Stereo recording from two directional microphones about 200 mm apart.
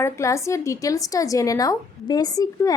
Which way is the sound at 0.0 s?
15° left (ahead or behind).